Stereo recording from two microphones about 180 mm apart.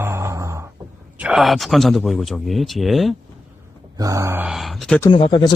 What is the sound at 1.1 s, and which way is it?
Speech, 5° right (ahead or behind).